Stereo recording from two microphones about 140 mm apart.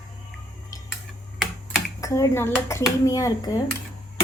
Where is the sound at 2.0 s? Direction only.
20° left (ahead or behind).